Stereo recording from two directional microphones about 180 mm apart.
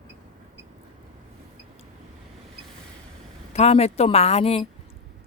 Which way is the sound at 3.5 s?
35° left (ahead or behind).